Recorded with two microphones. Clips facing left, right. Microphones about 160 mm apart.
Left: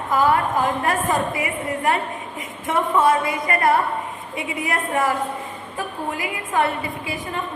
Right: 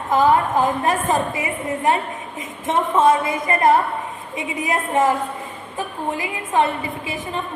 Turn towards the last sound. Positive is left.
turn(degrees=-20)  # may be behind; listen again after turning